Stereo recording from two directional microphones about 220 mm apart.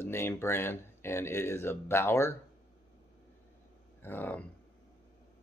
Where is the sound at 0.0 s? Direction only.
10° left (ahead or behind).